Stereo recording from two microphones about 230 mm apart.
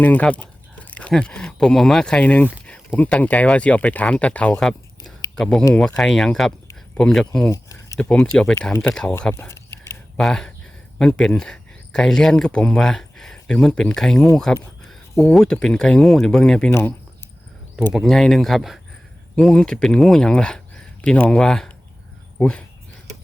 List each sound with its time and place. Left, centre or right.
0.0 s speech: centre
7.5 s speech: centre
17.9 s speech: centre